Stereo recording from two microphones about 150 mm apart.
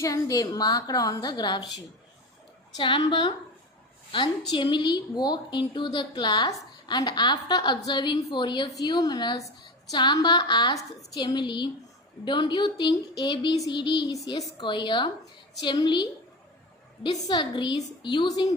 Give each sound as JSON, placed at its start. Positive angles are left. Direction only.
{"t": 0.0, "sound": "a woman's voice", "side_deg": 25}
{"t": 2.7, "sound": "a woman's voice", "side_deg": 35}